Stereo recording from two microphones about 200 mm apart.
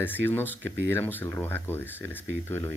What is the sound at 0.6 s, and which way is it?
Speech, 65° right (ahead or behind).